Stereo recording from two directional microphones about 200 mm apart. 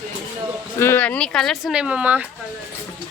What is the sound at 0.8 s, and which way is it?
Speech, 10° left (ahead or behind).